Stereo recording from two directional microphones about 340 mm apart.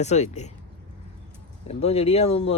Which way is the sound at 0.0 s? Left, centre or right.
Centre.